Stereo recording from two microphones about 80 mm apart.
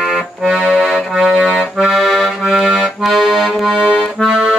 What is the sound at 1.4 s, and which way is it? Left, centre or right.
Accordion, centre.